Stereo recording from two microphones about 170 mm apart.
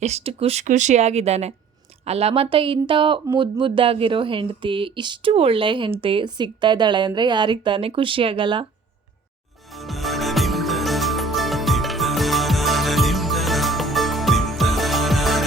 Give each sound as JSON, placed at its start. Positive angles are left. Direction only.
{"t": 0.0, "sound": "a woman's voice", "side_deg": -40}
{"t": 9.7, "sound": "music", "side_deg": 0}